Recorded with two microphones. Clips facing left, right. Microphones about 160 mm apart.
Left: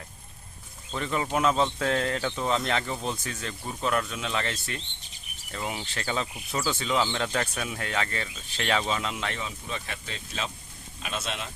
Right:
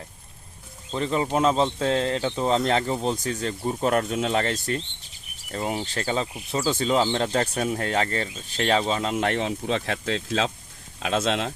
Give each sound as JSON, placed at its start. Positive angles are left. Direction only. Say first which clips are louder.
{"t": 0.9, "sound": "speech", "louder": "right 5 dB", "side_deg": -30}
{"t": 9.1, "sound": "speech", "louder": "right 10 dB", "side_deg": -60}